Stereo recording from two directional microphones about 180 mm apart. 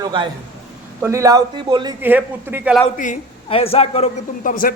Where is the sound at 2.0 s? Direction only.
10° right (ahead or behind).